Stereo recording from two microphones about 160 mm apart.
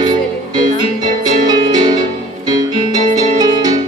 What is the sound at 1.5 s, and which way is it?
Music, 25° right (ahead or behind).